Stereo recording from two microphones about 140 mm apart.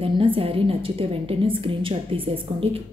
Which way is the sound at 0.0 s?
40° right (ahead or behind).